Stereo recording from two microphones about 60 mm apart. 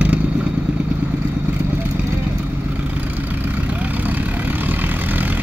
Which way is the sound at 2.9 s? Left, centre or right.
Right.